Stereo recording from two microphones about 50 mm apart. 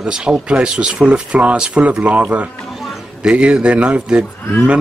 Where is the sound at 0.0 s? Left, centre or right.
Centre.